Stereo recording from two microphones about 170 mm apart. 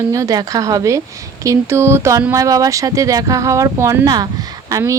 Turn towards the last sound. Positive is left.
turn(degrees=-20)  # may be behind; listen again after turning